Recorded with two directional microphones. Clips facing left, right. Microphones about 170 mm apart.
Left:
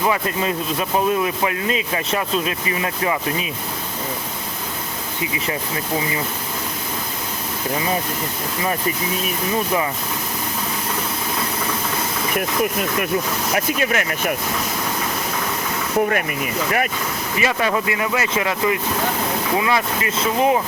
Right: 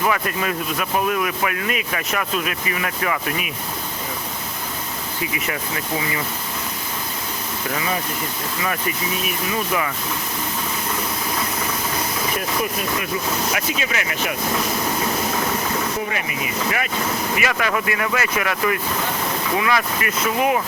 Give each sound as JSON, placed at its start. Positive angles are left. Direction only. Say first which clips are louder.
{"t": 0.0, "sound": "speech", "louder": "left 1 dB", "side_deg": 25}
{"t": 5.2, "sound": "speech", "louder": "left 2 dB", "side_deg": 25}
{"t": 13.7, "sound": "speech", "louder": "left 4 dB", "side_deg": 50}
{"t": 16.0, "sound": "speech", "louder": "left 4 dB", "side_deg": 50}
{"t": 17.4, "sound": "speech", "louder": "left 5 dB", "side_deg": 25}